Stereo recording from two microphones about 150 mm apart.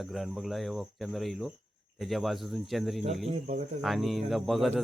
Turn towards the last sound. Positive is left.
turn(degrees=0)  # may be behind; listen again after turning